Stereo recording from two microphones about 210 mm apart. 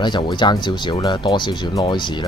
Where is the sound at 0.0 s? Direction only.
25° left (ahead or behind).